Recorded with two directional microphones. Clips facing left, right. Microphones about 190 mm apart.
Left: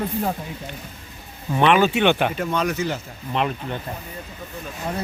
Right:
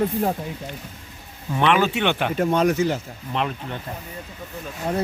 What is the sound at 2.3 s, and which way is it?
Speech, 45° right (ahead or behind).